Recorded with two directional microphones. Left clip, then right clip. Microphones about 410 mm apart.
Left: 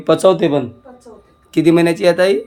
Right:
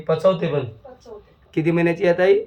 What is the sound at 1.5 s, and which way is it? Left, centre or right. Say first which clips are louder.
Speech: left 7 dB; centre.